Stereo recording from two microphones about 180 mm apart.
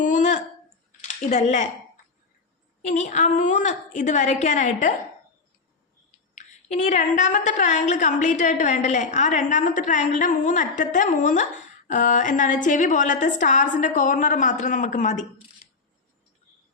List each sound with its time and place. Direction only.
0.0 s a sound: 45° left (ahead or behind)
1.0 s speech: 40° left (ahead or behind)
2.8 s a woman's voice: 45° left (ahead or behind)
6.3 s a woman's voice: 40° left (ahead or behind)